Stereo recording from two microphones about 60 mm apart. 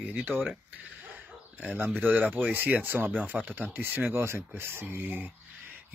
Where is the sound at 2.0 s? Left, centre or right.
Right.